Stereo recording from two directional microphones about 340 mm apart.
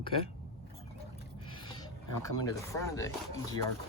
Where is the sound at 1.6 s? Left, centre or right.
Centre.